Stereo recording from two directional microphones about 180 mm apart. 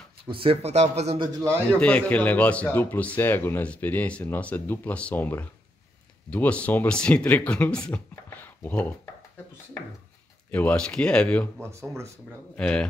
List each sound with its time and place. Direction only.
0.3 s speech: 30° right (ahead or behind)
1.7 s speech: 5° left (ahead or behind)
10.5 s speech: 5° left (ahead or behind)